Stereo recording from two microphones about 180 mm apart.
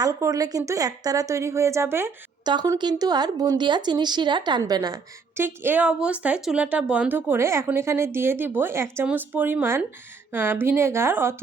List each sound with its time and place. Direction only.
0.0 s a woman's voice: 20° right (ahead or behind)
2.5 s a woman's voice: 25° right (ahead or behind)